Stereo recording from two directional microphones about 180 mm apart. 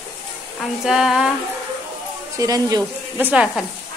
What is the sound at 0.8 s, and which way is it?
Speech, 5° right (ahead or behind).